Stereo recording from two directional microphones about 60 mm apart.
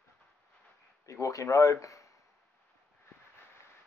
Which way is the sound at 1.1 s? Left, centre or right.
Left.